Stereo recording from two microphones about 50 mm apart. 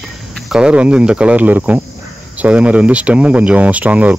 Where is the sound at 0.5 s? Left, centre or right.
Right.